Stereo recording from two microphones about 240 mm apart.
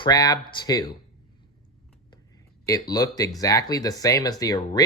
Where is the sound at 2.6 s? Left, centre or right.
Centre.